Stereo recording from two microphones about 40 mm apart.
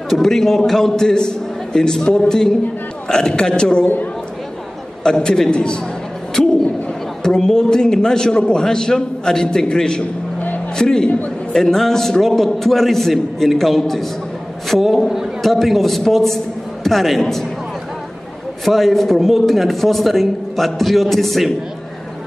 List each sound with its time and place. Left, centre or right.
0.1 s a man's voice: centre
5.0 s a man's voice: centre
6.4 s a sound: centre
7.2 s a man's voice: centre
18.7 s a man's voice: centre